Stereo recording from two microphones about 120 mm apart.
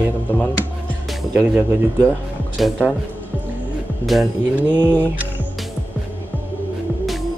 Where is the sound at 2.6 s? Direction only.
Centre (ahead or behind).